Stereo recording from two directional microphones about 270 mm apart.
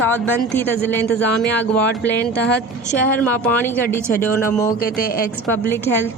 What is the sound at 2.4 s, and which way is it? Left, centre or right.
Speech, left.